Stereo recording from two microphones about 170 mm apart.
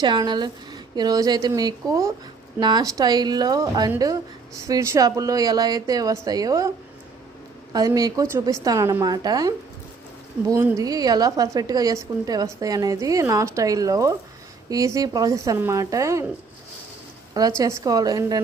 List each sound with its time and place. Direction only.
0.0 s a woman's voice: 25° right (ahead or behind)
7.7 s a woman's voice: 20° right (ahead or behind)
17.6 s a woman's voice: 20° right (ahead or behind)